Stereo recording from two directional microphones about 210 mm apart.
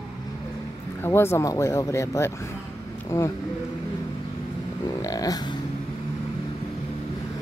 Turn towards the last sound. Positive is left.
turn(degrees=20)  # may be behind; listen again after turning